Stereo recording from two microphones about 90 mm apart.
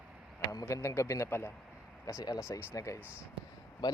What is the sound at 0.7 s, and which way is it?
Speech, 30° left (ahead or behind).